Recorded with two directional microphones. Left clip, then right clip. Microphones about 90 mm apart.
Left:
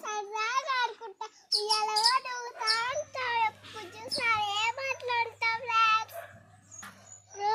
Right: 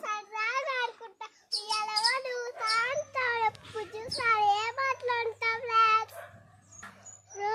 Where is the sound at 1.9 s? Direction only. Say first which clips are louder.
Left 2 dB; 30° right (ahead or behind).